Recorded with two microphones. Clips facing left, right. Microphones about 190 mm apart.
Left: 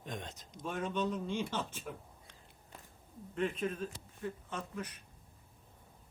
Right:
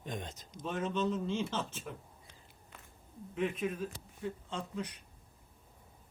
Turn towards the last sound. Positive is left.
turn(degrees=-15)  # may be behind; listen again after turning